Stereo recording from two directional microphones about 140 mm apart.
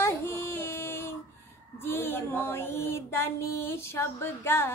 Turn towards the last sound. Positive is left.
turn(degrees=15)  # may be behind; listen again after turning